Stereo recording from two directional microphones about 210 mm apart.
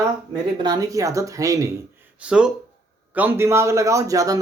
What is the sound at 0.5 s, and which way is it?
A man's voice, 20° right (ahead or behind).